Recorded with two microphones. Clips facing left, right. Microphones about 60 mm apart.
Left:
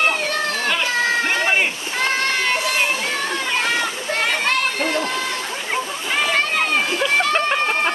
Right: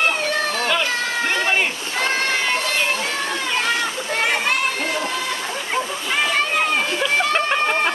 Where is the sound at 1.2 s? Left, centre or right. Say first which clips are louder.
Left 1 dB; centre.